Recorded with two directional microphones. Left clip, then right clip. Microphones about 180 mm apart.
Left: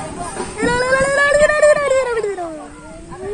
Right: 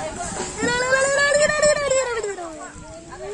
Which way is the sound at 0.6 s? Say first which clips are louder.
Left 4 dB; 50° left (ahead or behind).